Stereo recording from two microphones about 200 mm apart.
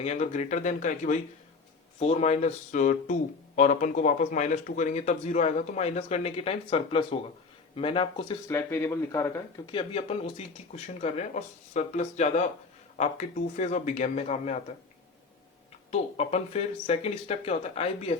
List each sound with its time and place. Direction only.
0.0 s speech: 35° left (ahead or behind); by 9.3 s 15° left (ahead or behind)
9.7 s speech: 30° left (ahead or behind)
15.9 s speech: 30° left (ahead or behind)